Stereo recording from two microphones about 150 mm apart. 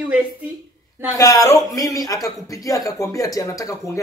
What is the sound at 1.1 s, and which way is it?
Speech, 20° left (ahead or behind).